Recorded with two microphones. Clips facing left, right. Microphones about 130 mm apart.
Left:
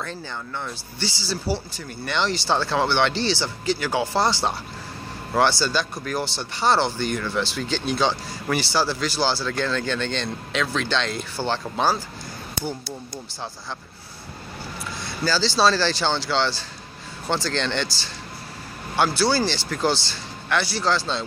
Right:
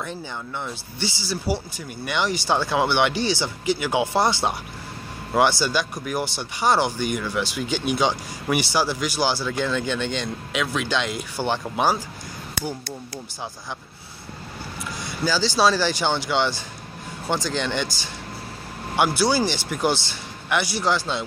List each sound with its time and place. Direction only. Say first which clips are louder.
0.7 s speech: right 1 dB; 15° right (ahead or behind)
15.2 s speech: even; 15° right (ahead or behind)